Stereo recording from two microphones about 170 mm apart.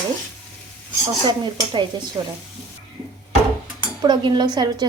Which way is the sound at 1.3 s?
25° right (ahead or behind).